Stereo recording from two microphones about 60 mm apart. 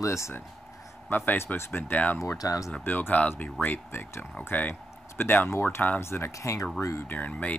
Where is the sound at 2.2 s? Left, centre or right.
Left.